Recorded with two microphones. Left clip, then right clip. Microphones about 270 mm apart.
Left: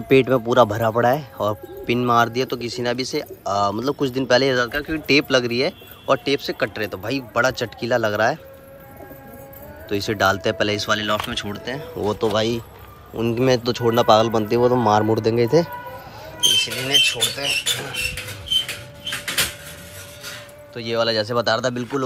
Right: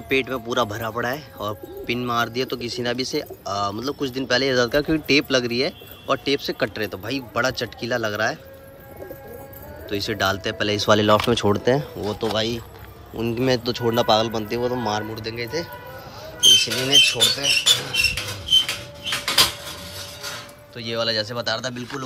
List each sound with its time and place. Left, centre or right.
0.1 s speech: centre
9.8 s speech: centre
10.9 s speech: centre
12.0 s speech: centre
16.5 s speech: centre
20.7 s speech: centre